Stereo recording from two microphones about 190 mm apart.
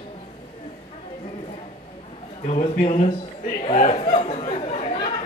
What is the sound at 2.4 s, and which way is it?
A man's voice, 40° left (ahead or behind).